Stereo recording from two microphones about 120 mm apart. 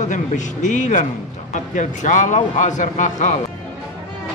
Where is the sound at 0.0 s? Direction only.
90° left.